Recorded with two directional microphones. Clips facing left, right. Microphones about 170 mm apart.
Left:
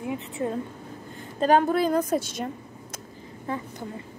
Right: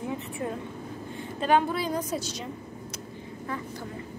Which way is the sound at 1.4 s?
45° left (ahead or behind).